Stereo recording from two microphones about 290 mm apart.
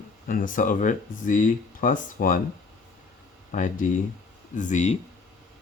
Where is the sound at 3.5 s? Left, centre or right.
Left.